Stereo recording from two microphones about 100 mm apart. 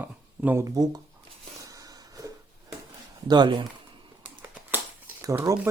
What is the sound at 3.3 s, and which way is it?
Speech, 50° right (ahead or behind).